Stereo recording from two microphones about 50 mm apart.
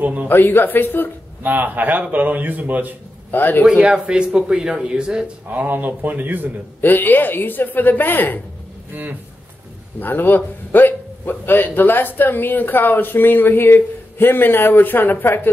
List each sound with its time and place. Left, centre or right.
0.0 s a man's voice: right
0.3 s a man's voice: left
1.4 s a man's voice: right
3.3 s a man's voice: left
3.6 s speech: centre
5.5 s a man's voice: right
6.8 s a woman's voice: left
9.9 s a man's voice: left